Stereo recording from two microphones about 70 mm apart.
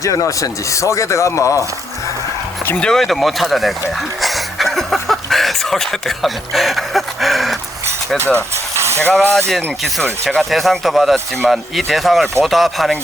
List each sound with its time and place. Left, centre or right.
0.0 s speech: left
2.8 s speech: centre
4.2 s a sound: centre
8.2 s speech: right
9.5 s speech: centre